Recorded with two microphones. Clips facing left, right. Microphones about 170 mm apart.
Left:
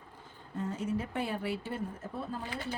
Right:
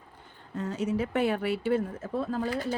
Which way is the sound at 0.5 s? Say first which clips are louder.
Right 5 dB; 85° right.